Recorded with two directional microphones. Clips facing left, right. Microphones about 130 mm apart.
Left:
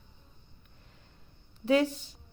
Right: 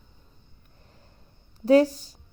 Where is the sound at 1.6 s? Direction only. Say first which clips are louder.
Right 7 dB; 40° right (ahead or behind).